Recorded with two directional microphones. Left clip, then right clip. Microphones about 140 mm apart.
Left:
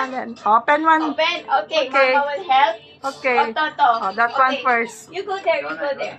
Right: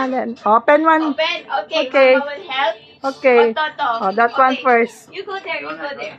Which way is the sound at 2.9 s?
20° right (ahead or behind).